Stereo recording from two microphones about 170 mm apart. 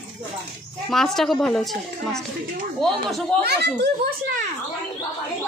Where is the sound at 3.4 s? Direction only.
75° right (ahead or behind).